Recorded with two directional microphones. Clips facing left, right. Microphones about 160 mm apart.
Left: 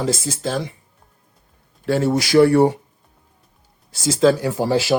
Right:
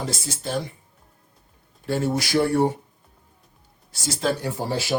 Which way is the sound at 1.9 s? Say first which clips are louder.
Left 6 dB; 90° left.